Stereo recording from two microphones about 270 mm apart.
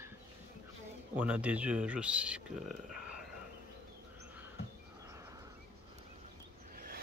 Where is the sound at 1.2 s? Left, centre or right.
Centre.